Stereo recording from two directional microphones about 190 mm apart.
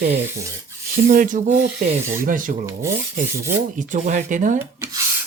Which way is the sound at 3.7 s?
40° right (ahead or behind).